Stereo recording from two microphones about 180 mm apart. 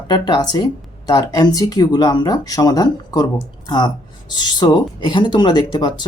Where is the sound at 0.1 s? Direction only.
25° left (ahead or behind).